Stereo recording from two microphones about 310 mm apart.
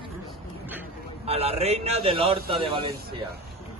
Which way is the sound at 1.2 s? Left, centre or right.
Centre.